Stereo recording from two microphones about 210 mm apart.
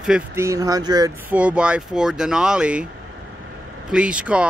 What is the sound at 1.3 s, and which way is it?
Speech, 5° right (ahead or behind).